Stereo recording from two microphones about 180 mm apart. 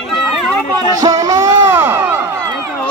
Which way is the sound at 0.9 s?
20° right (ahead or behind).